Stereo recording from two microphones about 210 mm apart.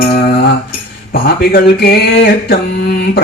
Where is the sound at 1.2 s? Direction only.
45° left (ahead or behind).